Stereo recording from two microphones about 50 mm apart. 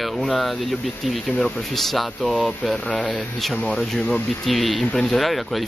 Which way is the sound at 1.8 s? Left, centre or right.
Centre.